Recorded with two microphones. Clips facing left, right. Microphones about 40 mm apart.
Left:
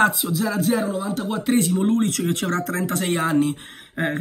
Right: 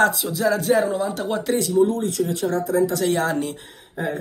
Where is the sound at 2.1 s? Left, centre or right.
Left.